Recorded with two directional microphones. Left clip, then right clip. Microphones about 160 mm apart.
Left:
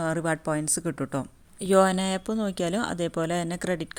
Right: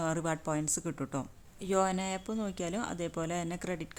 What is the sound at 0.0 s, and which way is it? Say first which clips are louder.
A woman's voice: left 6 dB; 20° left (ahead or behind).